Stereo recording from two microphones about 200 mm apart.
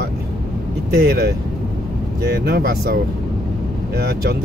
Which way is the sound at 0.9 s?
50° right (ahead or behind).